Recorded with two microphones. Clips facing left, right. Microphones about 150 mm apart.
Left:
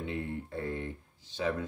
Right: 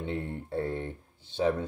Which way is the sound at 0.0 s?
30° right (ahead or behind).